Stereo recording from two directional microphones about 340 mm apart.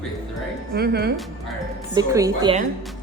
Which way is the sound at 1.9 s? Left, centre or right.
Centre.